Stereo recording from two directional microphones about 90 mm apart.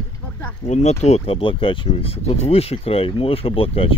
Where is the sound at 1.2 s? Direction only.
80° left.